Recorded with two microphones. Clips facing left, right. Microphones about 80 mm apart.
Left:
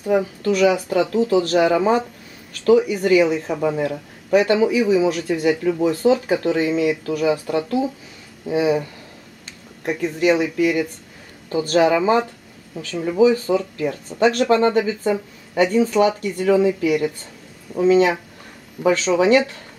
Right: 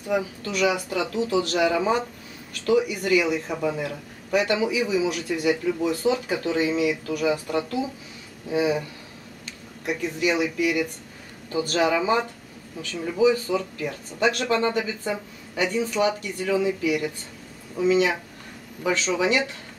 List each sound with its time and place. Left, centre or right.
0.1 s a man's voice: left
8.5 s speech: centre
9.8 s a man's voice: left
13.2 s speech: left